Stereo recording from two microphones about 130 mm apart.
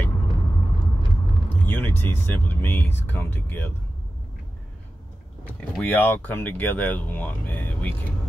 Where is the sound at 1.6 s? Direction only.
15° left (ahead or behind).